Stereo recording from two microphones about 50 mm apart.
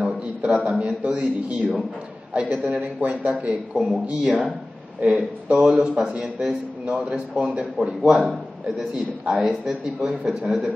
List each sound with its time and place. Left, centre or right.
0.0 s a sound: right
0.7 s a man's voice: right
3.7 s a man's voice: centre
4.3 s speech: centre
5.0 s a man's voice: centre